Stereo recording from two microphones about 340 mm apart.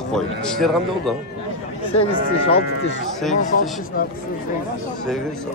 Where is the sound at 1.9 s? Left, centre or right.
Centre.